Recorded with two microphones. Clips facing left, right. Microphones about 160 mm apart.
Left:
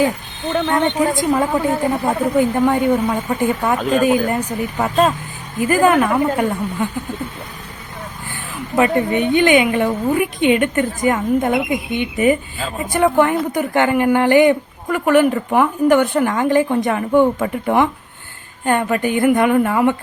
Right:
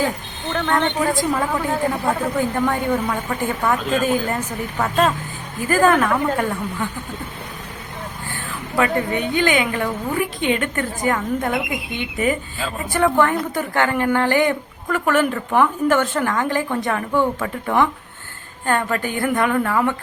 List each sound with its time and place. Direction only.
0.5 s a woman's voice: 15° left (ahead or behind)
8.3 s a woman's voice: 20° left (ahead or behind)